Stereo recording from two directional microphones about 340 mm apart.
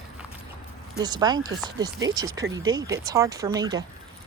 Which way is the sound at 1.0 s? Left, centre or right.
Centre.